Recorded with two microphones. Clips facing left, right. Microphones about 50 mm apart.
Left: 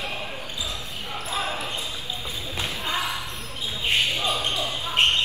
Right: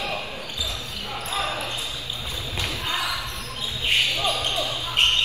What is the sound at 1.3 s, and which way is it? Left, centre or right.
Basketball bounce, left.